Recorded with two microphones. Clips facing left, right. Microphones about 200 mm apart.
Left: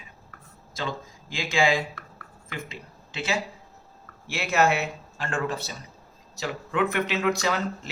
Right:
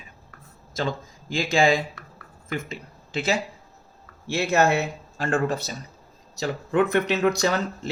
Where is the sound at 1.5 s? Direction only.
40° right (ahead or behind).